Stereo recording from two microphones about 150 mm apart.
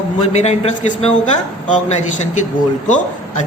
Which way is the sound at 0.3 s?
50° left (ahead or behind).